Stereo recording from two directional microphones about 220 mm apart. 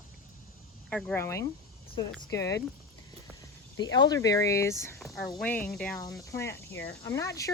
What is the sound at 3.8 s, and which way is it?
Speech, 20° left (ahead or behind).